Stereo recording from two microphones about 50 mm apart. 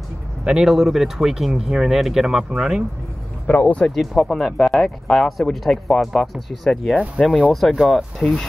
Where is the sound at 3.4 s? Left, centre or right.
Left.